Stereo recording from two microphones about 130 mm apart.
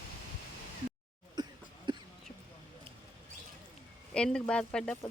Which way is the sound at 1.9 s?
35° right (ahead or behind).